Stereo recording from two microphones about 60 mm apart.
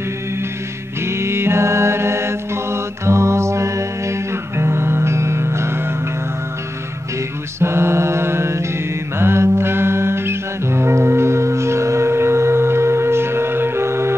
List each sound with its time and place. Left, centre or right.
1.0 s mantra: right
7.6 s mantra: right
9.2 s music: right